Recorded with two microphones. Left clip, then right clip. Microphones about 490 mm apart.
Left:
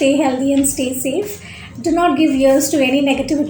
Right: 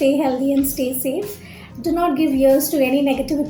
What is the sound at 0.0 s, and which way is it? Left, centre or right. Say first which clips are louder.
A woman's voice: left 3 dB; right.